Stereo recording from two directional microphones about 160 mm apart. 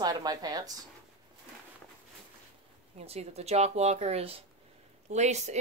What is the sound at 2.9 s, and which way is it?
Speech, 40° right (ahead or behind).